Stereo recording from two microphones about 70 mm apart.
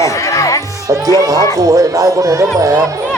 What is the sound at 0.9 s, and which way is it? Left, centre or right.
Speech, right.